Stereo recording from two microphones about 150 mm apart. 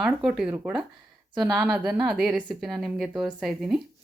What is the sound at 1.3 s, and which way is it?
Speech, 30° right (ahead or behind).